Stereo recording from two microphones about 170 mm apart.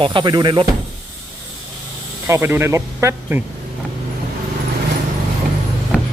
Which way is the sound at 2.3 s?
15° right (ahead or behind).